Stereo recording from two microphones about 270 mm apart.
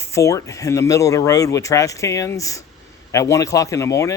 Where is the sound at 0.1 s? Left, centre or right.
Centre.